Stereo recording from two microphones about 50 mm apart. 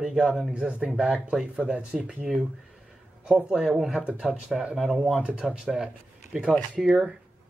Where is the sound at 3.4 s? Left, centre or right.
Centre.